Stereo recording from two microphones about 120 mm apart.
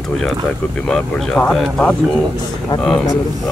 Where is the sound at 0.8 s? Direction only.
5° left (ahead or behind).